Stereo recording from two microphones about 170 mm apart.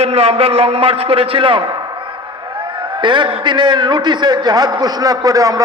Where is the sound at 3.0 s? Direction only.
25° right (ahead or behind).